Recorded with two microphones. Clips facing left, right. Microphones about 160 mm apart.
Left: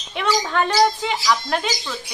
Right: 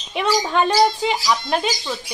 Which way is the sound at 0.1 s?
20° right (ahead or behind).